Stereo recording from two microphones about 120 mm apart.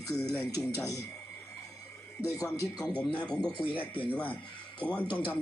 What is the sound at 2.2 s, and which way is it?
Speech, 30° left (ahead or behind).